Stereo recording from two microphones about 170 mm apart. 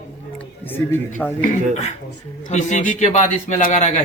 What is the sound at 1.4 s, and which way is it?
A man's voice, 40° left (ahead or behind).